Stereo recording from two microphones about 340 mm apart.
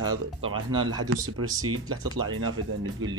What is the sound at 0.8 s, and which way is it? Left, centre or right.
Speech, right.